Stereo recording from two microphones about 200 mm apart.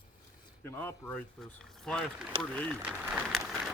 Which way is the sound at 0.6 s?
10° left (ahead or behind).